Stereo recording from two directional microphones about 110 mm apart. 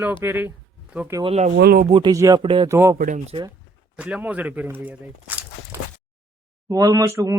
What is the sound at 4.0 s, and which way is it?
Speech, 10° right (ahead or behind).